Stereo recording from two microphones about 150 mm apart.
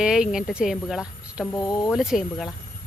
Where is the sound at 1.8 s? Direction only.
5° right (ahead or behind).